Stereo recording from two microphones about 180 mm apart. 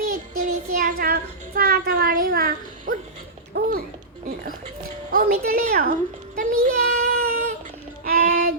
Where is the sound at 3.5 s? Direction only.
60° right (ahead or behind).